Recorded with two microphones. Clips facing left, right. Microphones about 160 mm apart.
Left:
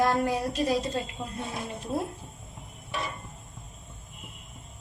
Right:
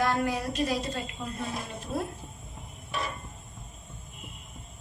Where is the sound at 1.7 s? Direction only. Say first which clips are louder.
Left 2 dB; 25° left (ahead or behind).